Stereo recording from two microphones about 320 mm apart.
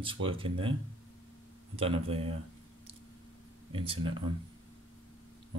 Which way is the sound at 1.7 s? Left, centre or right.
Centre.